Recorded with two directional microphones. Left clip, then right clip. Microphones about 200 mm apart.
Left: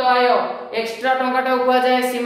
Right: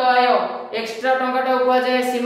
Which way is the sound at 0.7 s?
25° left (ahead or behind).